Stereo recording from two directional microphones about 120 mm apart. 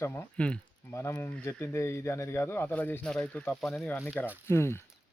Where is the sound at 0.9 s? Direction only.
20° left (ahead or behind).